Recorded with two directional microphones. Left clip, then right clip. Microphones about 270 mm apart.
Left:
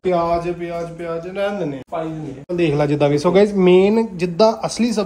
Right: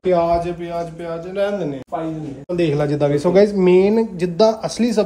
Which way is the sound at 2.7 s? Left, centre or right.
Left.